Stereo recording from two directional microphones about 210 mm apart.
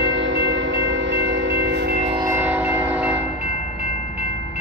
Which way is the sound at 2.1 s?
15° right (ahead or behind).